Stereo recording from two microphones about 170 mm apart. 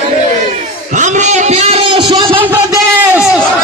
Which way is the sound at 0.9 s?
45° right (ahead or behind).